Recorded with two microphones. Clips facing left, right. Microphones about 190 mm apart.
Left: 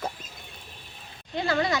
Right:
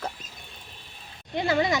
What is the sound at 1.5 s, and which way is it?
Speech, 20° right (ahead or behind).